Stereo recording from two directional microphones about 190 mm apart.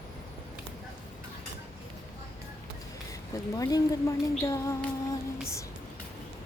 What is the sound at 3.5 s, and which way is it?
Speech, 20° left (ahead or behind).